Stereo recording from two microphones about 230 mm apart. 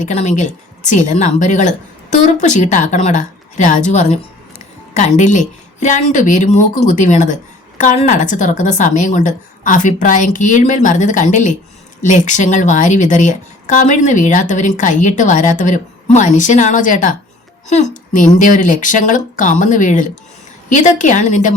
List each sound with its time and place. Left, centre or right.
0.0 s a woman's voice: left